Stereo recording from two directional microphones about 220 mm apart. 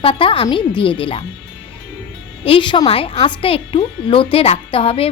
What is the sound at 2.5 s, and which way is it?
A woman's voice, 20° left (ahead or behind).